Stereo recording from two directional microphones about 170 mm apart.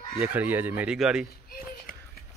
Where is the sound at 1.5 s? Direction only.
60° left (ahead or behind).